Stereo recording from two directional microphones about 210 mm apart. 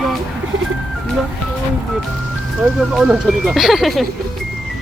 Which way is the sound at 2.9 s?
Centre (ahead or behind).